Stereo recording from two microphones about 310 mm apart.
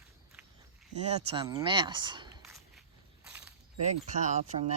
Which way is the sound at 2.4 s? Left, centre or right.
Centre.